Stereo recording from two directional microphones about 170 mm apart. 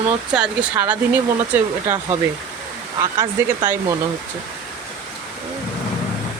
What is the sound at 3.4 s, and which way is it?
Speech, 15° right (ahead or behind).